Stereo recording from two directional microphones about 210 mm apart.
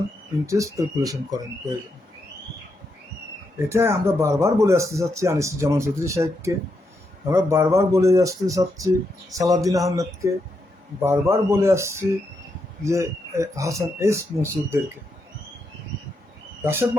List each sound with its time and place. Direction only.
0.4 s speech: 15° right (ahead or behind)
3.7 s speech: 10° right (ahead or behind)
16.6 s speech: 10° right (ahead or behind)